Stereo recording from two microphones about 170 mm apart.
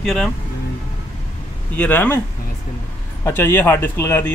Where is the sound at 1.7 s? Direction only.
10° left (ahead or behind).